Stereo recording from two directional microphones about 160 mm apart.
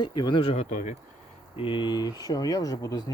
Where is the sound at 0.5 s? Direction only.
45° left (ahead or behind).